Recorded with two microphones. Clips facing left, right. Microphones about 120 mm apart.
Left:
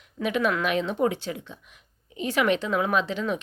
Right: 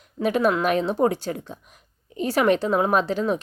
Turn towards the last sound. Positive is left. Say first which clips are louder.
# right 4 dB
turn(degrees=-40)  # may be behind; listen again after turning